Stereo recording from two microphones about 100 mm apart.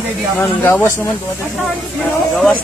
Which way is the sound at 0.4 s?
20° left (ahead or behind).